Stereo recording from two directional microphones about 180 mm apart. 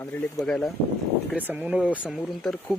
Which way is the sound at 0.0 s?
10° left (ahead or behind).